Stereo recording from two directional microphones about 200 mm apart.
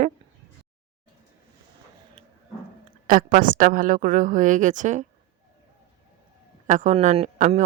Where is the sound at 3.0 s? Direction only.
45° right (ahead or behind).